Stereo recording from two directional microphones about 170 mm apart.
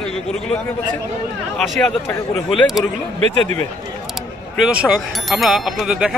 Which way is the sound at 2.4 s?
Centre (ahead or behind).